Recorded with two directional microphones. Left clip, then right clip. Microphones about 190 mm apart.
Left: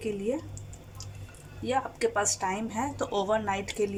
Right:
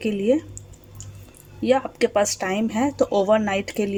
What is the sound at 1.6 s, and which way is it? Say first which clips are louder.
Speech: right 8 dB; 40° right (ahead or behind).